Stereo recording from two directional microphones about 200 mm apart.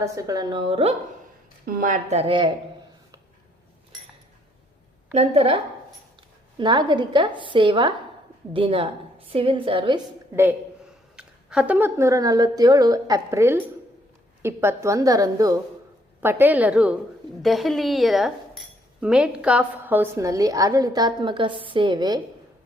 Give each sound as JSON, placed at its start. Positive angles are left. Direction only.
{"t": 0.0, "sound": "a woman's voice", "side_deg": -15}
{"t": 1.6, "sound": "speech", "side_deg": -45}
{"t": 5.1, "sound": "a woman's voice", "side_deg": -30}
{"t": 6.6, "sound": "a woman's voice", "side_deg": -20}
{"t": 11.2, "sound": "a woman's voice", "side_deg": -5}